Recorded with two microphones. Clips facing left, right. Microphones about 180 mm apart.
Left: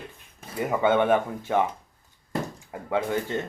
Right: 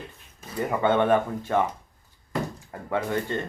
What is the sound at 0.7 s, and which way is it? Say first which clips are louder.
Speech: even; 10° left (ahead or behind).